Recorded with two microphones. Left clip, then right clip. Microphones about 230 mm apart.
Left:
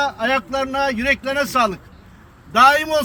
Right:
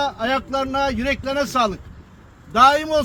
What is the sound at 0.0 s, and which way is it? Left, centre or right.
A man's voice, centre.